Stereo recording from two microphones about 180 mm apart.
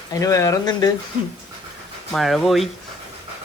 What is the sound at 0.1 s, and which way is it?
Speech, 20° left (ahead or behind).